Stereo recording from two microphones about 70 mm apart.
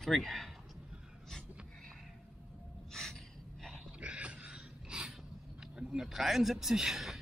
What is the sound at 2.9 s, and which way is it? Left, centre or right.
Gasp, centre.